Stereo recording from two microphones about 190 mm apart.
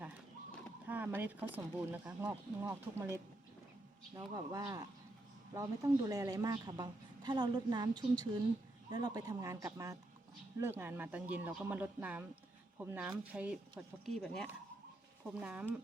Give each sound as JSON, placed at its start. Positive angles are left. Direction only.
{"t": 0.9, "sound": "a woman's voice", "side_deg": -10}